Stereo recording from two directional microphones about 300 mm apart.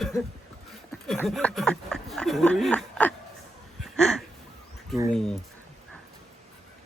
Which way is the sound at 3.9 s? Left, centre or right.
Centre.